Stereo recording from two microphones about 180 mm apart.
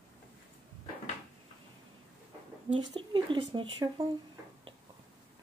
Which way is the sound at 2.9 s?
25° right (ahead or behind).